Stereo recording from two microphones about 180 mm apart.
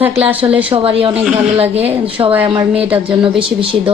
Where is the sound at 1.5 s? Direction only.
35° right (ahead or behind).